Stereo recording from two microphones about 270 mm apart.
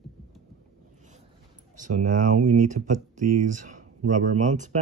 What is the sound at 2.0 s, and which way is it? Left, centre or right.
Speech, right.